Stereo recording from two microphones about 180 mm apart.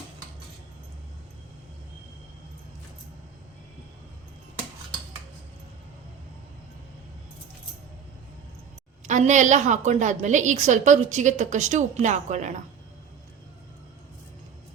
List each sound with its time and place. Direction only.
9.0 s a woman's voice: 45° right (ahead or behind)